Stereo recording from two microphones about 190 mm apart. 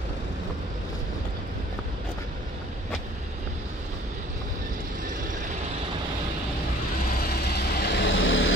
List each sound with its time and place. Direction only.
7.1 s vehicle: 60° left (ahead or behind); by 8.5 s 90° left